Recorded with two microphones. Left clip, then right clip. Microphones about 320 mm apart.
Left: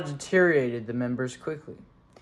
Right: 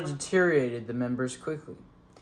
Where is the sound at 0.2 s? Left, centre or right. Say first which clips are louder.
Left 3 dB; left.